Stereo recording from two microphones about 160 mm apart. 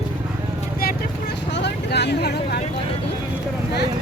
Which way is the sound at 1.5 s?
90° left.